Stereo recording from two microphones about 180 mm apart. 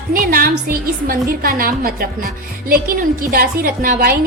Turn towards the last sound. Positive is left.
turn(degrees=-50)  # may be behind; listen again after turning